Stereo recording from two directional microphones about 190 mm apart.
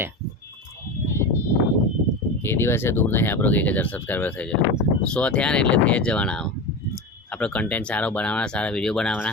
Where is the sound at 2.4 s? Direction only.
15° left (ahead or behind).